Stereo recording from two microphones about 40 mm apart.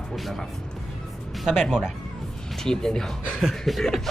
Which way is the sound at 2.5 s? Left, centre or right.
Centre.